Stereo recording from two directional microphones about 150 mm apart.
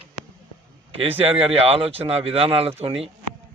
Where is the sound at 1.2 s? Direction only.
40° right (ahead or behind).